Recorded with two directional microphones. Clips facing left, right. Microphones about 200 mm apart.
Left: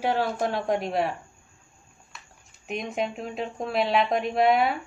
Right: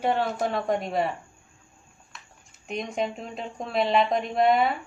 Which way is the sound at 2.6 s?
Centre (ahead or behind).